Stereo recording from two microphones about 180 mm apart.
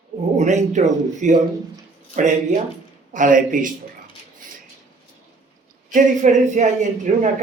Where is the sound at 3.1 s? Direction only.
45° right (ahead or behind).